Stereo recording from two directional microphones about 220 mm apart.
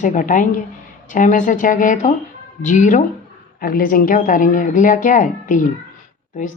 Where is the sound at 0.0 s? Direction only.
35° left (ahead or behind).